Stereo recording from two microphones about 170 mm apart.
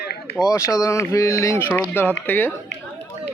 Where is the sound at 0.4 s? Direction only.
15° left (ahead or behind).